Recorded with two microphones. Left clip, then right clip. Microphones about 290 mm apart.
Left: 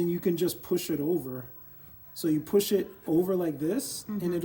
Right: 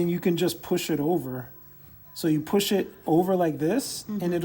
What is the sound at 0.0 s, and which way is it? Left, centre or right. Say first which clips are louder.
Speech: right 3 dB; centre.